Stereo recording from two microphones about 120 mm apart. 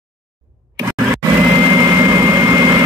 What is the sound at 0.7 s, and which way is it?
Grunt, 30° right (ahead or behind).